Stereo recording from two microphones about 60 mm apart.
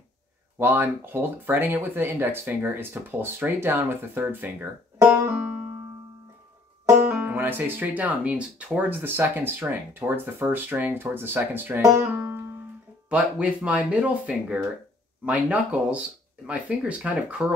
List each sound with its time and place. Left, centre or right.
0.6 s speech: right
7.1 s speech: right
12.0 s music: right
13.1 s speech: right